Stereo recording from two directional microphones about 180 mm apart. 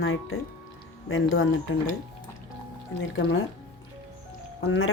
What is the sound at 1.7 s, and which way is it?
Speech, 90° left.